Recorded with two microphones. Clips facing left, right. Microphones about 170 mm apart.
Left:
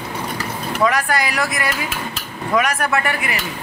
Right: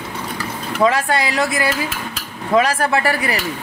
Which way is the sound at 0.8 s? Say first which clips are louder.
Right 2 dB; 25° right (ahead or behind).